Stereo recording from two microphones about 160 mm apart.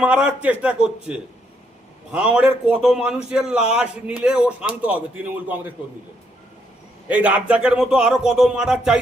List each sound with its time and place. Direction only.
0.0 s a man's voice: 10° right (ahead or behind)
7.1 s speech: 10° right (ahead or behind)